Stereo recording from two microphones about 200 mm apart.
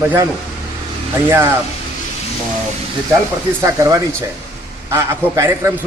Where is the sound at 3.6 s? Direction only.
15° right (ahead or behind).